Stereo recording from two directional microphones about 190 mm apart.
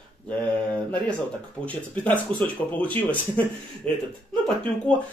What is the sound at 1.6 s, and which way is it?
Speech, 10° left (ahead or behind).